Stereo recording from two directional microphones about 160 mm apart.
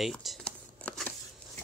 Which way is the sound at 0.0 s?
Centre (ahead or behind).